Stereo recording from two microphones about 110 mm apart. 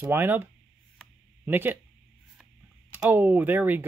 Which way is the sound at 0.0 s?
20° right (ahead or behind).